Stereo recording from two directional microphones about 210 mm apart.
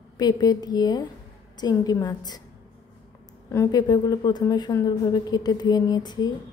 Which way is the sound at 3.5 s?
15° left (ahead or behind).